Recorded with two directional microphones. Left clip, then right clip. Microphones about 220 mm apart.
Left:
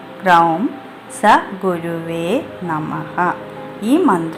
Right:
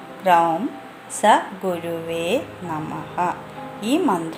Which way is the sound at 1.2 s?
5° right (ahead or behind).